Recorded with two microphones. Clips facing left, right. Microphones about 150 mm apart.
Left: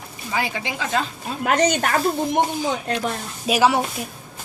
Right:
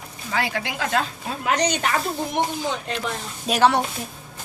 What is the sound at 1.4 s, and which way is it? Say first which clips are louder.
Speech: left 3 dB; 50° left (ahead or behind).